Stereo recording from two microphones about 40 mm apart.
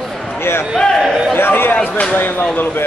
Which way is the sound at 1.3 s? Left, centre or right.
Left.